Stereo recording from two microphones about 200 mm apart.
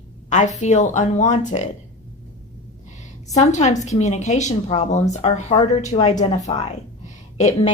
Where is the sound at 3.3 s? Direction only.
35° left (ahead or behind).